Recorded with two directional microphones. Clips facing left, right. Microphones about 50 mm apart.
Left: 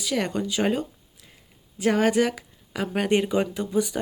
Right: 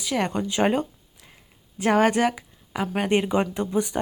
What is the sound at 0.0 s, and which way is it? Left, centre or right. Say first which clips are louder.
A woman's voice: right 1 dB; centre.